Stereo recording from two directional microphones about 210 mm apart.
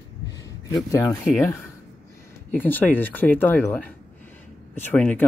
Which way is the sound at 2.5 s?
10° left (ahead or behind).